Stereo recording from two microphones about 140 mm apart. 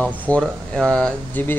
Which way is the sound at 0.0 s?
5° left (ahead or behind).